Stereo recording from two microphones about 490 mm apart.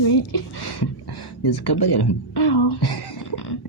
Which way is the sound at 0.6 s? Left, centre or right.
Left.